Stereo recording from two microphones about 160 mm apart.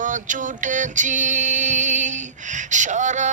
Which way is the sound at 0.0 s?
55° right (ahead or behind).